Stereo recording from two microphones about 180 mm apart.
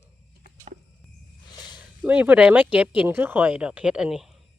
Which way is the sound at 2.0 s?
10° right (ahead or behind).